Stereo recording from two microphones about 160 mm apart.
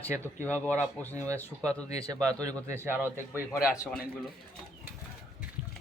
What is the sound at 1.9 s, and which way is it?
Speech, 20° right (ahead or behind).